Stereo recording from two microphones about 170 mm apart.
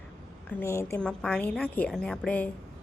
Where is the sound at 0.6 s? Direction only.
15° left (ahead or behind).